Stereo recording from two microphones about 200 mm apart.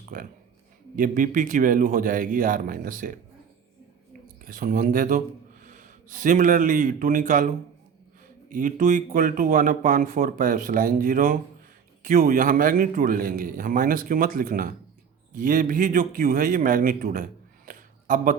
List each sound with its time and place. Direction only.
0.0 s speech: 45° right (ahead or behind)
4.4 s a man's voice: 45° right (ahead or behind)